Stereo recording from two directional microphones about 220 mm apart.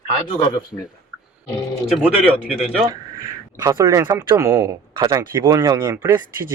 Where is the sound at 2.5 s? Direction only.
Centre (ahead or behind).